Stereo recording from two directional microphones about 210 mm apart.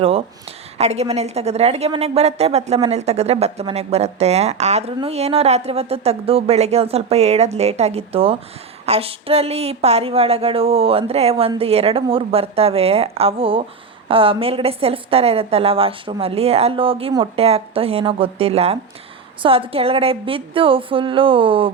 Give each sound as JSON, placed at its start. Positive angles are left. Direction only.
{"t": 0.8, "sound": "a woman's voice", "side_deg": -30}